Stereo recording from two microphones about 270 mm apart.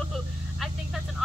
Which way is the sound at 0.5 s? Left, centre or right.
Centre.